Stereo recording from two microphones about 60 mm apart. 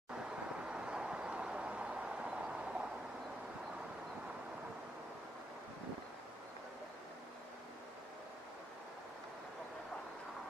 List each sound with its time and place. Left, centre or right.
0.7 s vehicle: centre